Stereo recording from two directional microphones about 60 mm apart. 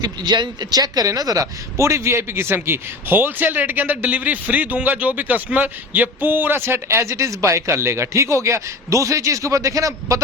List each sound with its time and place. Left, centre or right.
0.7 s speech: right
1.7 s a man's voice: right
6.8 s speech: right